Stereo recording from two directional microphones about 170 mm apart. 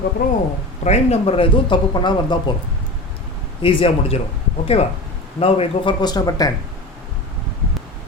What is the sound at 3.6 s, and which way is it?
Speech, 35° left (ahead or behind).